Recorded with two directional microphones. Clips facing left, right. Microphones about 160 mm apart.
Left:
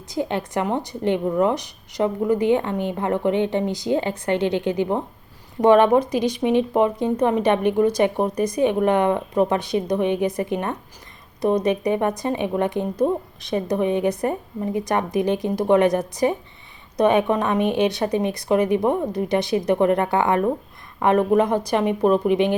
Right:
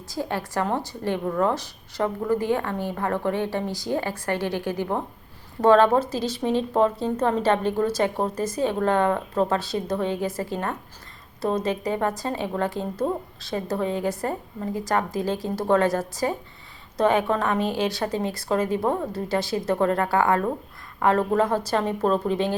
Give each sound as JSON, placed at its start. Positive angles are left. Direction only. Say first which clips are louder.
{"t": 0.1, "sound": "a woman's voice", "louder": "left 4 dB", "side_deg": 20}